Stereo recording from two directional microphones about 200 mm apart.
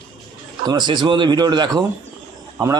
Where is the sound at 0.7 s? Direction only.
20° right (ahead or behind).